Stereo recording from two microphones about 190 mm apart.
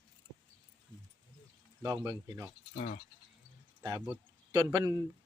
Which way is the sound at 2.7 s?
50° left (ahead or behind).